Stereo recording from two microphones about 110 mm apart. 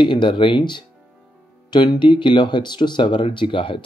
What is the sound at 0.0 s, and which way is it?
Speech, 45° left (ahead or behind).